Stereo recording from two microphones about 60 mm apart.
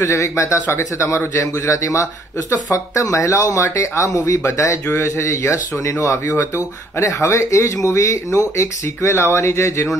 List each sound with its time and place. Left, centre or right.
0.0 s speech: left
4.9 s speech: left